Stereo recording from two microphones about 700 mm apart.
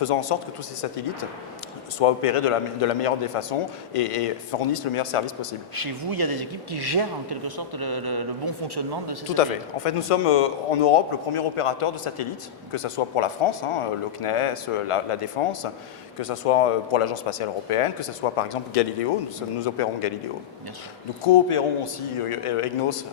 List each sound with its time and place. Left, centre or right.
0.0 s speech: left
5.7 s speech: right
9.3 s speech: left
21.2 s speech: left